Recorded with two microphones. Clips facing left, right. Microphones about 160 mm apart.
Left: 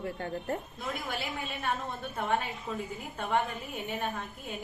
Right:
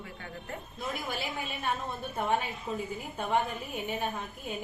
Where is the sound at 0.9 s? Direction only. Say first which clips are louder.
Even; centre (ahead or behind).